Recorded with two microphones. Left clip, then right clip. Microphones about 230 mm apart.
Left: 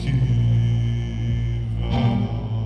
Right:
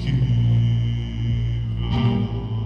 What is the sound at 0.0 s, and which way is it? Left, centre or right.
Music, left.